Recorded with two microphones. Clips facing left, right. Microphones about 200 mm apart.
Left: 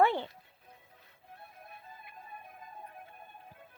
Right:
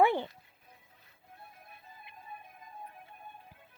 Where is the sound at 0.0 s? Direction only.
15° right (ahead or behind).